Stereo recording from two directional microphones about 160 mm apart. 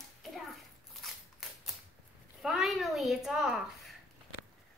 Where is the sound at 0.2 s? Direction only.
Centre (ahead or behind).